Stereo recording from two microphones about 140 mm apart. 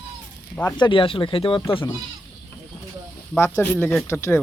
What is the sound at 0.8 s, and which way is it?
Speech, 35° left (ahead or behind).